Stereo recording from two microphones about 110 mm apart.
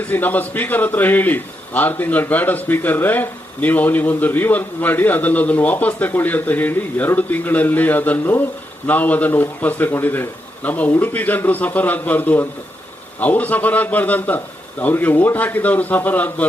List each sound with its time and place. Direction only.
0.0 s a man's voice: 15° left (ahead or behind)